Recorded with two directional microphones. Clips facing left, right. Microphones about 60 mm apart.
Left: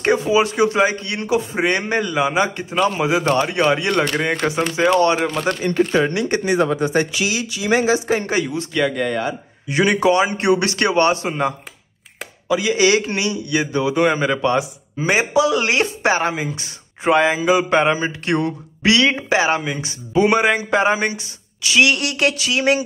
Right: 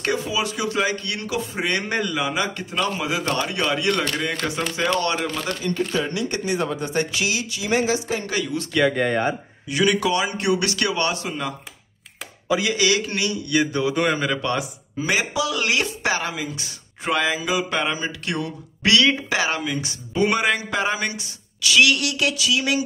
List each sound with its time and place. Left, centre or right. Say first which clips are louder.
0.0 s a man's voice: left 8 dB; left
5.6 s speech: left 7 dB; left
6.4 s speech: left 7 dB; left
8.7 s speech: right 1 dB; centre
9.7 s a man's voice: left 4 dB; left
12.4 s speech: left 3 dB; centre
12.7 s a man's voice: left 5 dB; left
13.1 s a man's voice: left 2 dB; centre; by 18.5 s left
18.8 s a man's voice: left 2 dB; left
22.0 s a man's voice: left 3 dB; left